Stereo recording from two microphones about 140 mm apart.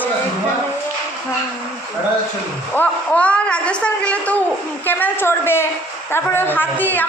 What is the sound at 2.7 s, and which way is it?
Speech, 10° left (ahead or behind).